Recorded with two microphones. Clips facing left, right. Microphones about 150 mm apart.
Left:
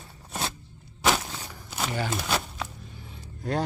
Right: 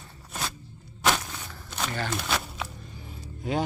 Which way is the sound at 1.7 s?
10° left (ahead or behind).